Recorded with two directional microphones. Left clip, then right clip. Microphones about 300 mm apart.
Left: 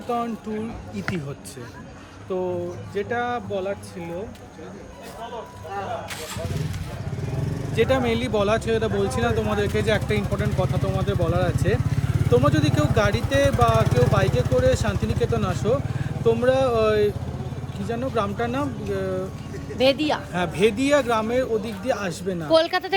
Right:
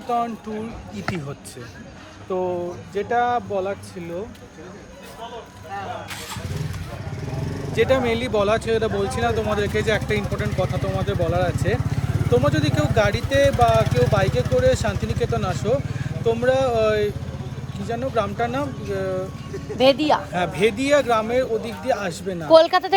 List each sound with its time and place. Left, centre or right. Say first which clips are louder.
0.1 s speech: right 4 dB; centre
2.3 s speech: right 2 dB; centre
7.8 s speech: right 2 dB; centre
13.8 s speech: right 1 dB; left
14.1 s speech: right 2 dB; centre
19.8 s speech: right 4 dB; centre
20.3 s speech: right 1 dB; centre
22.4 s speech: right 6 dB; centre